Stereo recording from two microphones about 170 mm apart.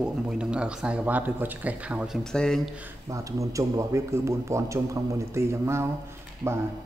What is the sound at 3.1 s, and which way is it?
Speech, 20° right (ahead or behind).